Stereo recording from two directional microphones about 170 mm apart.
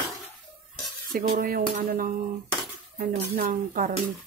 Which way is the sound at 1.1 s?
55° right (ahead or behind).